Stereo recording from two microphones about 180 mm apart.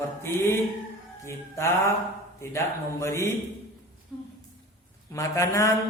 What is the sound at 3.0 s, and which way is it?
Speech, 15° left (ahead or behind).